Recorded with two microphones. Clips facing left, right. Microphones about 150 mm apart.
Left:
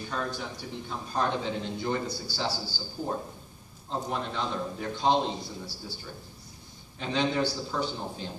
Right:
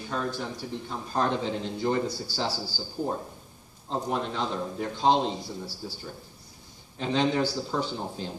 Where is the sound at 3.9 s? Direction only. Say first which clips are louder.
Right 3 dB; centre (ahead or behind).